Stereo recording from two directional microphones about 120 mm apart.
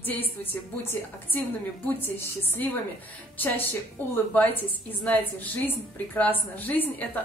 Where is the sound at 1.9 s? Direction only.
20° left (ahead or behind).